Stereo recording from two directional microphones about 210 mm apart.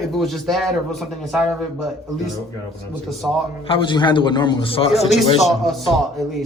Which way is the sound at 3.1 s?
Centre (ahead or behind).